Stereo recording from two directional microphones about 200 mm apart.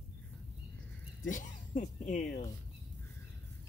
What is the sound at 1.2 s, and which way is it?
Speech, 40° left (ahead or behind).